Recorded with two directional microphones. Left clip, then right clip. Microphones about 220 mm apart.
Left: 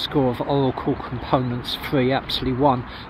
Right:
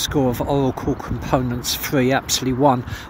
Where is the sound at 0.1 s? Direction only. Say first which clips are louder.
Left 1 dB; 20° right (ahead or behind).